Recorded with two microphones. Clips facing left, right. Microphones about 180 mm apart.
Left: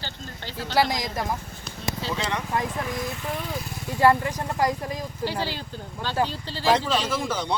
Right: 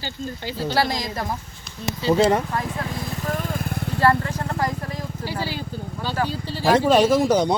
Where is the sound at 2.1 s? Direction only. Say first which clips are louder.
Right 13 dB; 40° right (ahead or behind).